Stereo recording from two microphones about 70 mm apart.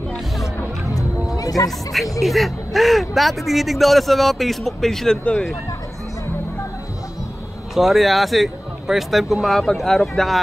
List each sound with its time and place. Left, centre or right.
0.9 s music: left
2.1 s a man's voice: centre
7.7 s a man's voice: centre